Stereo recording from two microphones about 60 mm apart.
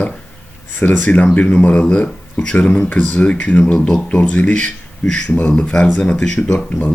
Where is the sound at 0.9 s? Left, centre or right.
Left.